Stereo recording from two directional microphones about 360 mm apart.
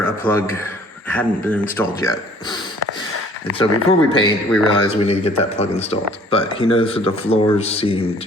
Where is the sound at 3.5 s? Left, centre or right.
Centre.